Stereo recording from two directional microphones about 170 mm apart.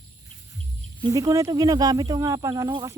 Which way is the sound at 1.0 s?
20° right (ahead or behind).